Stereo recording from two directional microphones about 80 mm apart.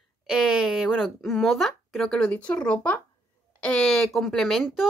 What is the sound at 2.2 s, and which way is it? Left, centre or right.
Speech, centre.